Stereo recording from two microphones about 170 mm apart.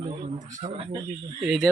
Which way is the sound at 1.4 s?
Centre (ahead or behind).